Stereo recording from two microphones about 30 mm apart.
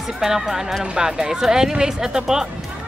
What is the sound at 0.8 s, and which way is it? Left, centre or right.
Speech, right.